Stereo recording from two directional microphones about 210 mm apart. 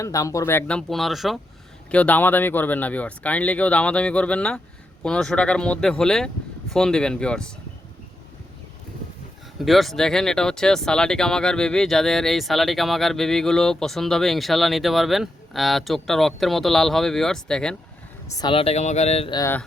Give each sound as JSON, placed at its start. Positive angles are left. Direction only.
{"t": 0.0, "sound": "speech", "side_deg": 15}
{"t": 9.6, "sound": "speech", "side_deg": 0}
{"t": 18.3, "sound": "speech", "side_deg": 25}
{"t": 19.4, "sound": "speech", "side_deg": 10}